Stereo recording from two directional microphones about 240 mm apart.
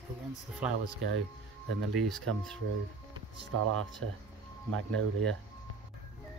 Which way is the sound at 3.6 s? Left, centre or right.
Right.